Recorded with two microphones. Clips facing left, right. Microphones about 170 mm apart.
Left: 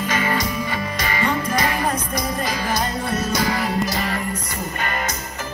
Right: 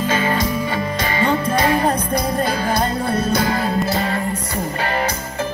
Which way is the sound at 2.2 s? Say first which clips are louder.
Right 4 dB; 55° right (ahead or behind).